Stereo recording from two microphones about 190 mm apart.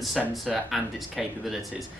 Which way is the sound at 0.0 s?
Centre (ahead or behind).